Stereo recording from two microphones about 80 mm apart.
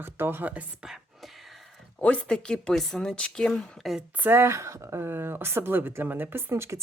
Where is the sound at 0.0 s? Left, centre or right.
Right.